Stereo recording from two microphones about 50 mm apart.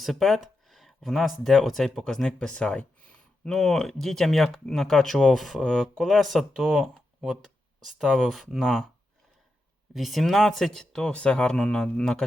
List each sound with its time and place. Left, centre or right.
0.0 s speech: centre
3.5 s speech: centre
7.2 s speech: centre
9.9 s speech: centre
11.1 s speech: left